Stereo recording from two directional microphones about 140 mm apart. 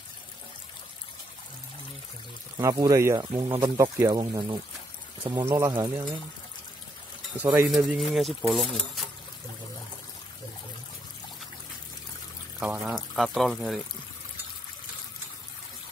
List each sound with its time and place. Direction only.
2.6 s speech: 25° right (ahead or behind)
3.6 s speech: 20° right (ahead or behind)
7.3 s speech: 10° right (ahead or behind)
7.7 s speech: centre (ahead or behind)
12.5 s speech: 5° right (ahead or behind)